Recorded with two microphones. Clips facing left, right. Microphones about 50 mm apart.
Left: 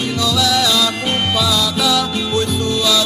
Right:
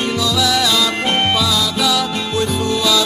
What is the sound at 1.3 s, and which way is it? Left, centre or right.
Music, centre.